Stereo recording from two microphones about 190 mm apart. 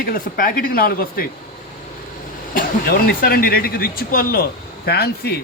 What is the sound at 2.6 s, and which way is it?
Speech, 50° left (ahead or behind).